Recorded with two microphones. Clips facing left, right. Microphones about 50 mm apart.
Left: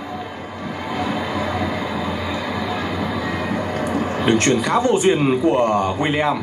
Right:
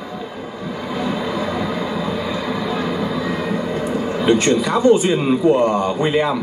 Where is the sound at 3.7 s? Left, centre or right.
Left.